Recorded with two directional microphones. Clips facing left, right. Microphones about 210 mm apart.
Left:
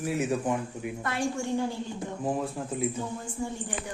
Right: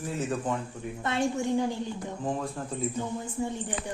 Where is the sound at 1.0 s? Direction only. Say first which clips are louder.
Right 3 dB; 20° right (ahead or behind).